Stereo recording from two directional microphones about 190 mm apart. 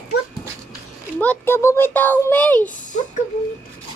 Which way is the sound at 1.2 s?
10° left (ahead or behind).